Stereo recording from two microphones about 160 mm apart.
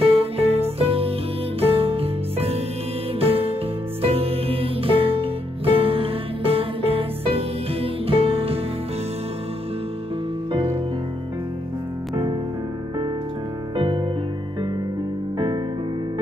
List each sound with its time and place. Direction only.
0.0 s music: 40° right (ahead or behind)
10.5 s music: 35° right (ahead or behind)
13.7 s music: 30° right (ahead or behind)
15.3 s music: 30° right (ahead or behind)